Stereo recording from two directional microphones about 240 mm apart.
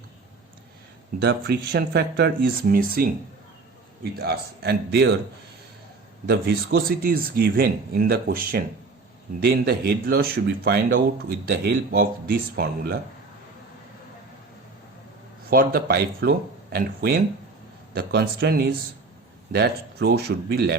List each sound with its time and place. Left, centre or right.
1.2 s speech: right
4.1 s speech: right
6.2 s speech: right
15.4 s speech: right